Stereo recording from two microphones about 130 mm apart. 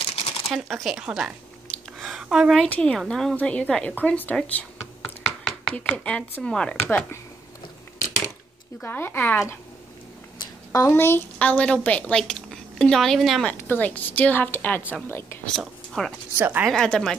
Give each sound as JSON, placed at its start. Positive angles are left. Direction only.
{"t": 0.0, "sound": "shuffling cards", "side_deg": 50}
{"t": 0.5, "sound": "speech", "side_deg": 0}
{"t": 2.0, "sound": "a sound", "side_deg": 0}
{"t": 2.7, "sound": "speech", "side_deg": 5}
{"t": 8.8, "sound": "a woman's voice", "side_deg": 15}
{"t": 10.4, "sound": "a sound", "side_deg": 30}
{"t": 10.9, "sound": "a woman's voice", "side_deg": 15}
{"t": 13.5, "sound": "a woman's voice", "side_deg": 10}
{"t": 15.4, "sound": "speech", "side_deg": 0}
{"t": 16.3, "sound": "speech", "side_deg": -15}
{"t": 16.6, "sound": "speech", "side_deg": 5}